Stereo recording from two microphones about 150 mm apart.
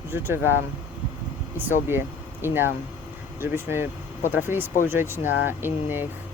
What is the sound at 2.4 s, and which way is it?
Speech, 15° right (ahead or behind).